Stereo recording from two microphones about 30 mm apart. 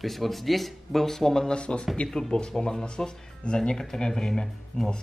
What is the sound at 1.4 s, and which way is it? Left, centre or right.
Speech, left.